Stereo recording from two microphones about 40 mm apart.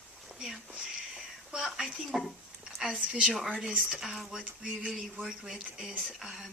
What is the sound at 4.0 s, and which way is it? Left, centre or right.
Speech, centre.